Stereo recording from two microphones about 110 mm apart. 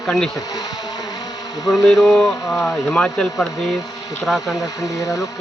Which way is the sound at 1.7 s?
Centre (ahead or behind).